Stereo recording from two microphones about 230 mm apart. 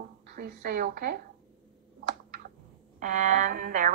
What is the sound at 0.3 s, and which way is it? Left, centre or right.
Speech, right.